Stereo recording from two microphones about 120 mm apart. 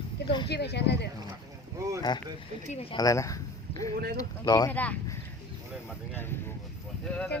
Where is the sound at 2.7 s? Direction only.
55° left (ahead or behind).